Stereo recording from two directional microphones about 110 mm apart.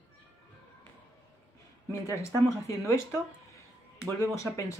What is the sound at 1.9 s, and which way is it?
Speech, 25° left (ahead or behind).